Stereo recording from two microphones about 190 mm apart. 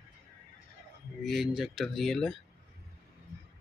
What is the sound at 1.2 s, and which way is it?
Speech, centre (ahead or behind).